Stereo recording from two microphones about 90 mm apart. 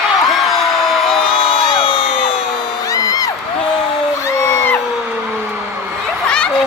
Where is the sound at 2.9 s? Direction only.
40° left (ahead or behind).